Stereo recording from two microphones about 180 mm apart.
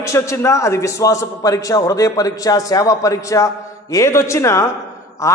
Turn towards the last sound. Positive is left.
turn(degrees=15)  # may be behind; listen again after turning